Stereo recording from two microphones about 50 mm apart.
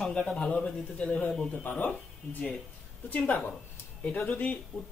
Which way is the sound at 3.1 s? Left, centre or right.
Left.